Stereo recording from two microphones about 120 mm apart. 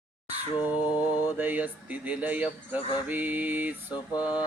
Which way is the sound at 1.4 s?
15° right (ahead or behind).